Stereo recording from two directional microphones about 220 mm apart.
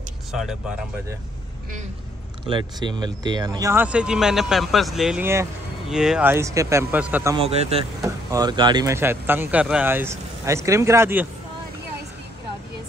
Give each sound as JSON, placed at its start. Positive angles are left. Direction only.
{"t": 0.3, "sound": "speech", "side_deg": 0}
{"t": 2.4, "sound": "speech", "side_deg": -20}
{"t": 7.3, "sound": "speech", "side_deg": -25}
{"t": 8.0, "sound": "speech", "side_deg": -15}